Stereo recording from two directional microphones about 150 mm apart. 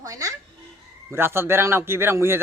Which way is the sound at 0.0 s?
25° right (ahead or behind).